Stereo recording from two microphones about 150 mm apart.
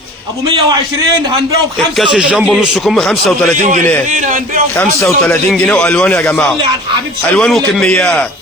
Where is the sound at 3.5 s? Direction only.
55° right (ahead or behind).